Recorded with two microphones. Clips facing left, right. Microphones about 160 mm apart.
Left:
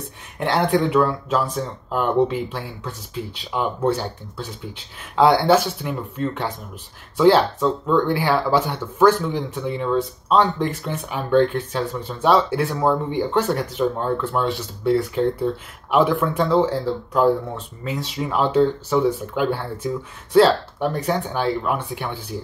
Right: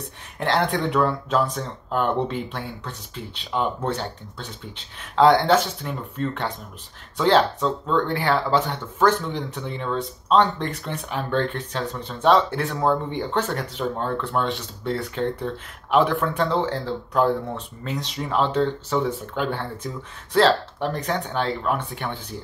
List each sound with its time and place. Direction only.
0.0 s speech: 5° left (ahead or behind)